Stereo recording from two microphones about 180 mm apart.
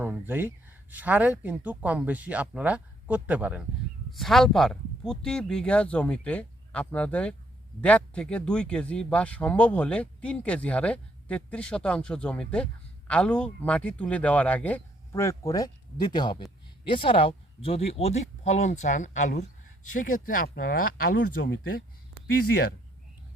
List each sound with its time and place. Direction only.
0.0 s speech: 10° right (ahead or behind); by 21.2 s 50° left (ahead or behind)
21.4 s speech: 85° left